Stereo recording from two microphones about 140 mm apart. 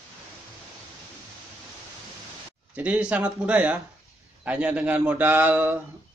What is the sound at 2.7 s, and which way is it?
A man's voice, 10° right (ahead or behind).